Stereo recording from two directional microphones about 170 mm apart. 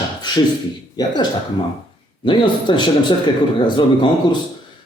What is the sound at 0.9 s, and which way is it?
A man's voice, 25° left (ahead or behind).